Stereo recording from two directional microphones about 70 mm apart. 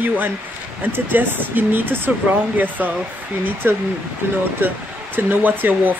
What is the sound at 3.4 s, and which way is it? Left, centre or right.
Speech, right.